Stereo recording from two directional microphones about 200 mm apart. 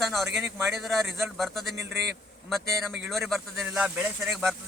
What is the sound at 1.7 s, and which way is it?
Speech, 60° right (ahead or behind).